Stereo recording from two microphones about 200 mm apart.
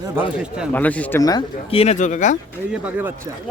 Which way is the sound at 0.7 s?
10° left (ahead or behind).